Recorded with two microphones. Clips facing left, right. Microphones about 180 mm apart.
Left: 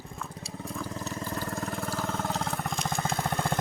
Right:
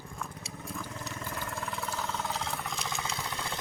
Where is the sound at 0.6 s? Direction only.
30° left (ahead or behind).